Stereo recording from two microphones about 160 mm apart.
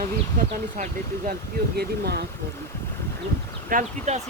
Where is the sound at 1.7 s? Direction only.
90° right.